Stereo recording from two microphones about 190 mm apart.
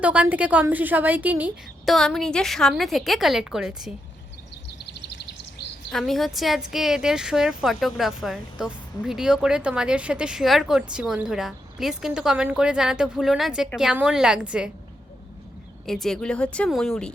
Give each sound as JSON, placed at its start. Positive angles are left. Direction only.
{"t": 0.0, "sound": "a woman's voice", "side_deg": -5}
{"t": 1.9, "sound": "speech", "side_deg": 0}
{"t": 5.1, "sound": "a sound", "side_deg": 65}
{"t": 5.9, "sound": "speech", "side_deg": 0}
{"t": 15.9, "sound": "speech", "side_deg": 0}